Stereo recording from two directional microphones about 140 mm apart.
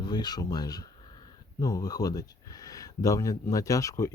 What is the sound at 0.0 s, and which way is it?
Speech, 30° left (ahead or behind).